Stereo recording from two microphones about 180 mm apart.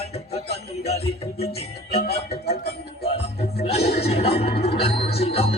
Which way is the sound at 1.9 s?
60° left (ahead or behind).